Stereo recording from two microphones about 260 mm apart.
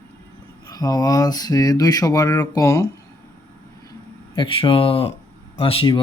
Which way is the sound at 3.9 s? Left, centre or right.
Centre.